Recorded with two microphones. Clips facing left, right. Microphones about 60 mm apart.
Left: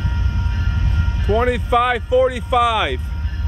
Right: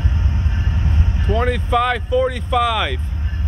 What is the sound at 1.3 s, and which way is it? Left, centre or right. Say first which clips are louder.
Speech: left 2 dB; centre.